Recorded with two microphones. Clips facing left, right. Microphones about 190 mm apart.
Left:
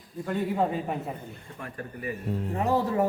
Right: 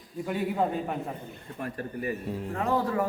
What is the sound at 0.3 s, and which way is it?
Speech, 5° right (ahead or behind).